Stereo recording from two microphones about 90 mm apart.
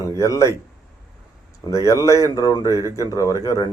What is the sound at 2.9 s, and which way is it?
Speech, 40° left (ahead or behind).